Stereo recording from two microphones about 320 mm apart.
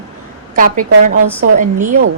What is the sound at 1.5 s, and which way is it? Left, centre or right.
Speech, right.